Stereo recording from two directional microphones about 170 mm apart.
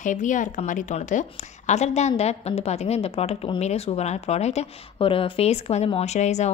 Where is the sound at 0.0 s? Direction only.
45° left (ahead or behind).